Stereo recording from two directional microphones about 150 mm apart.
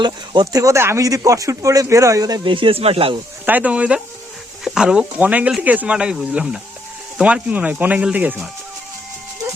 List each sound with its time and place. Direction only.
0.0 s speech: 25° right (ahead or behind)
3.4 s speech: 10° right (ahead or behind)